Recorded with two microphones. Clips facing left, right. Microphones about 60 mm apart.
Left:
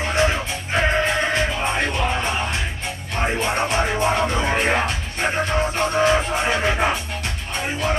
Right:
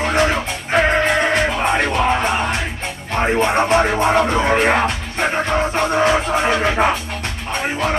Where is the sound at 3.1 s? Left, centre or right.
Right.